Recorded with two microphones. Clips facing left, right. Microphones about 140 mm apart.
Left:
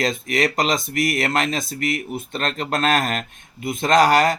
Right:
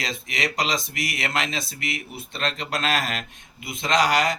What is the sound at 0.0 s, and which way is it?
Speech, 45° left (ahead or behind).